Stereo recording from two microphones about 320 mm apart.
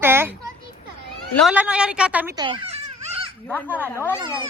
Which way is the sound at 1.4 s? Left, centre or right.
Centre.